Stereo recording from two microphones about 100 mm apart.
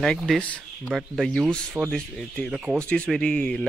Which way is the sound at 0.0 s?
5° left (ahead or behind).